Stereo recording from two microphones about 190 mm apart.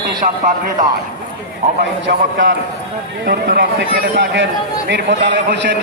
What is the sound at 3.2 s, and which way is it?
A man's voice, 60° right (ahead or behind).